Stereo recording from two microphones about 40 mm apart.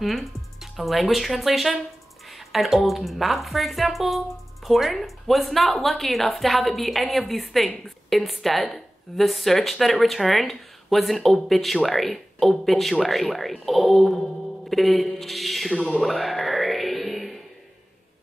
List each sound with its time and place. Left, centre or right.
0.0 s speech: centre
15.7 s speech: left
16.1 s music: centre